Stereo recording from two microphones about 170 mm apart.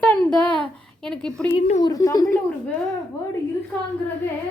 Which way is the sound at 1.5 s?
45° left (ahead or behind).